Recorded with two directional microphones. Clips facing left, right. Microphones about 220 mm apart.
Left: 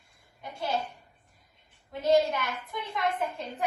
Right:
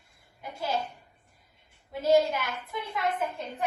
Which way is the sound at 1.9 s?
5° right (ahead or behind).